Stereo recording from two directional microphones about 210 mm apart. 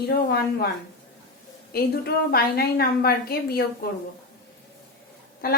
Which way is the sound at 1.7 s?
45° left (ahead or behind).